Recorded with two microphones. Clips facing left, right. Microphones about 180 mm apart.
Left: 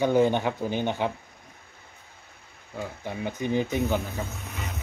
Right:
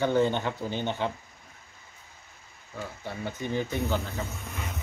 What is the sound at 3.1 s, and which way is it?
Speech, 15° left (ahead or behind).